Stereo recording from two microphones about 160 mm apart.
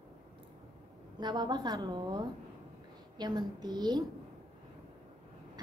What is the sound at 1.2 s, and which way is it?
A woman's voice, 25° right (ahead or behind).